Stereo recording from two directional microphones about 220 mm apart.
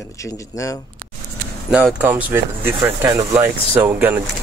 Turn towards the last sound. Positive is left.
turn(degrees=-5)  # may be behind; listen again after turning